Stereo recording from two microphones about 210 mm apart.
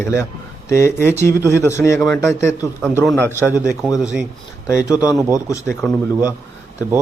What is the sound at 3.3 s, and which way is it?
Speech, 10° left (ahead or behind).